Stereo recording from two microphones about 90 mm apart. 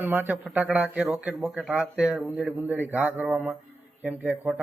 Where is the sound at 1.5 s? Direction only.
5° right (ahead or behind); by 3.5 s 20° right (ahead or behind).